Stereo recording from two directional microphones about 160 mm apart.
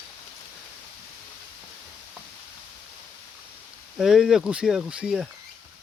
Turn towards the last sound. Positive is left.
turn(degrees=-5)  # may be behind; listen again after turning